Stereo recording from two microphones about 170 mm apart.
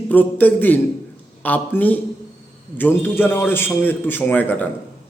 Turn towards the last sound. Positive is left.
turn(degrees=10)  # may be behind; listen again after turning